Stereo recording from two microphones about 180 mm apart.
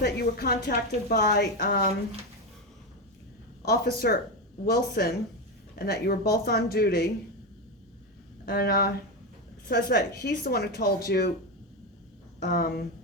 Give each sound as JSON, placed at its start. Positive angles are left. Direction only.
{"t": 0.0, "sound": "a woman's voice", "side_deg": 65}
{"t": 3.7, "sound": "a woman's voice", "side_deg": 60}
{"t": 8.4, "sound": "a woman's voice", "side_deg": 55}
{"t": 12.5, "sound": "a woman's voice", "side_deg": 55}